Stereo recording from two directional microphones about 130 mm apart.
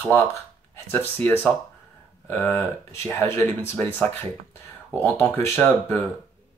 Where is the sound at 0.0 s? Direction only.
20° left (ahead or behind).